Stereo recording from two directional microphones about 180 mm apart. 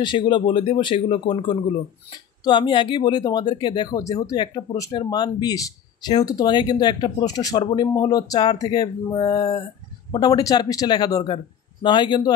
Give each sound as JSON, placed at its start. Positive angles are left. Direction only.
{"t": 0.0, "sound": "speech", "side_deg": 25}
{"t": 2.4, "sound": "speech", "side_deg": 25}